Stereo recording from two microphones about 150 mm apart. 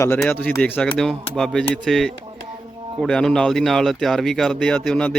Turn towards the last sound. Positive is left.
turn(degrees=5)  # may be behind; listen again after turning